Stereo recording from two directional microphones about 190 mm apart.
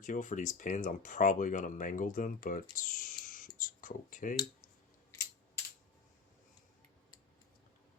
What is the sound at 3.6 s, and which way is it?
Computer keyboard, 45° left (ahead or behind).